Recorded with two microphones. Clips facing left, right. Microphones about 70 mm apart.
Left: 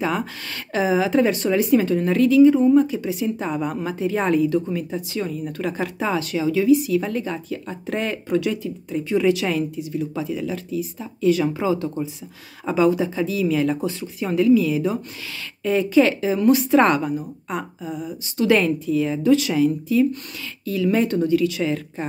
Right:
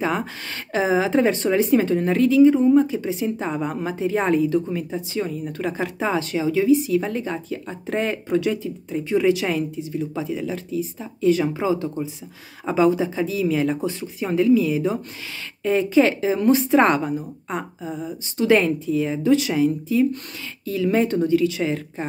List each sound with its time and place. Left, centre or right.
0.0 s speech: right